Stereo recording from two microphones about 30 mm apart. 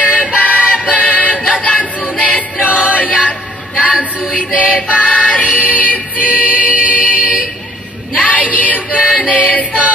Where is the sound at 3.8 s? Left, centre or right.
Right.